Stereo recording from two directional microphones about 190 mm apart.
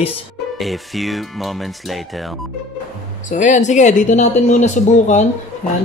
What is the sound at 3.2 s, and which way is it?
Speech, 40° left (ahead or behind).